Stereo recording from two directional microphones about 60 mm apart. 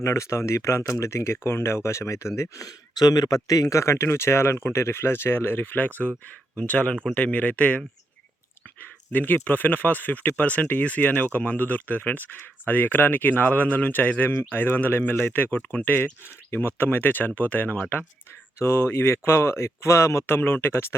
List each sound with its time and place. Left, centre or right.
0.0 s speech: left
2.6 s speech: left
6.6 s speech: left
8.8 s speech: left
18.6 s speech: left